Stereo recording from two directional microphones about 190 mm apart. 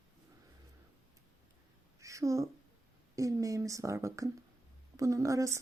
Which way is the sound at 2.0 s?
15° right (ahead or behind).